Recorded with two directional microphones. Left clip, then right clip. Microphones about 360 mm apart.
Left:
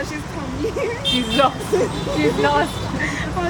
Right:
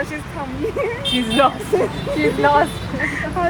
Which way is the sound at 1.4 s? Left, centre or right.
Right.